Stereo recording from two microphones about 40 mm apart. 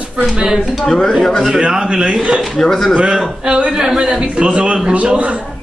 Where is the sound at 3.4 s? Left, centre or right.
Right.